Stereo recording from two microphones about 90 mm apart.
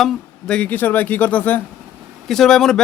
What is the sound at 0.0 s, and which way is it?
Speech, 10° left (ahead or behind).